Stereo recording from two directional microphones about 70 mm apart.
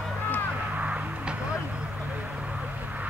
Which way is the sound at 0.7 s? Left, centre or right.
Centre.